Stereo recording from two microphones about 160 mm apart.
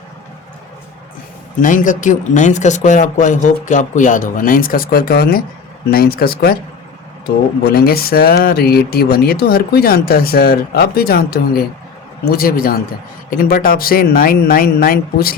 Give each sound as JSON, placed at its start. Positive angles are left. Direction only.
{"t": 1.6, "sound": "speech", "side_deg": 55}